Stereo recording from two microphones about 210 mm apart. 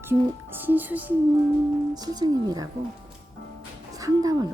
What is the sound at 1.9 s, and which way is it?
Speech, 20° right (ahead or behind).